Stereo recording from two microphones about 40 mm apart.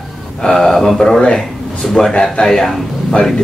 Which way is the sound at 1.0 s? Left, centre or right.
Centre.